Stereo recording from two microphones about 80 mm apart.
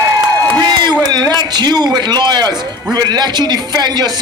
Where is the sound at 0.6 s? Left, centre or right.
Right.